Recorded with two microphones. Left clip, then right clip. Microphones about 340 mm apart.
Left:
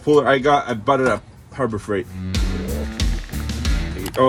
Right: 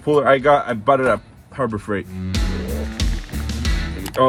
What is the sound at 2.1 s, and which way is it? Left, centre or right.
Music, centre.